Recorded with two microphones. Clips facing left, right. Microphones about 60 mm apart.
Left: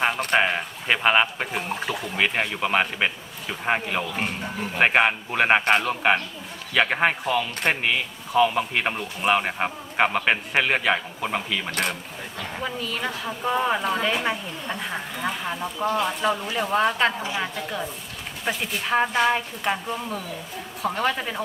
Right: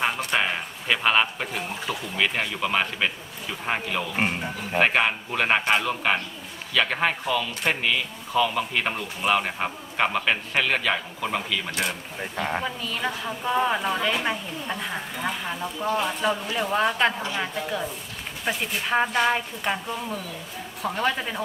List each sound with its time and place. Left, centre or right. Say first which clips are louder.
0.3 s a man's voice: left 4 dB; centre
11.7 s speech: left 3 dB; left
12.4 s a woman's voice: right 6 dB; right
12.6 s a woman's voice: even; centre
18.4 s a woman's voice: even; centre